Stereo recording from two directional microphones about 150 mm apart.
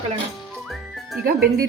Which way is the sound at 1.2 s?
80° right.